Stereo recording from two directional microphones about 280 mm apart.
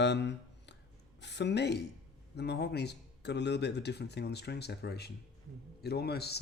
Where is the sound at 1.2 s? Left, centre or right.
Left.